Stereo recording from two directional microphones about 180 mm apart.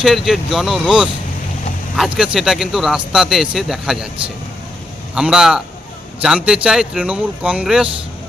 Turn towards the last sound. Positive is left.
turn(degrees=-5)  # may be behind; listen again after turning